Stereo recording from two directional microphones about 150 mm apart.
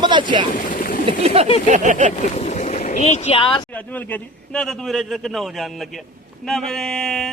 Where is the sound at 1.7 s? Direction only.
55° right (ahead or behind).